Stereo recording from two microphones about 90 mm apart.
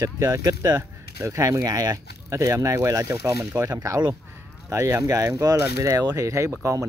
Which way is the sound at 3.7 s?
40° right (ahead or behind).